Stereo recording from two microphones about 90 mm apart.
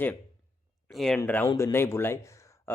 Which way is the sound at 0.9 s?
5° left (ahead or behind).